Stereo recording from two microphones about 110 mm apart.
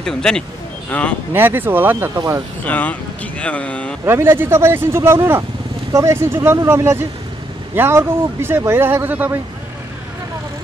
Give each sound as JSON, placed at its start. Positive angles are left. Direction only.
{"t": 0.0, "sound": "speech", "side_deg": 5}
{"t": 1.3, "sound": "speech", "side_deg": -20}
{"t": 2.1, "sound": "speech", "side_deg": -30}
{"t": 2.6, "sound": "speech", "side_deg": 15}
{"t": 4.0, "sound": "speech", "side_deg": -20}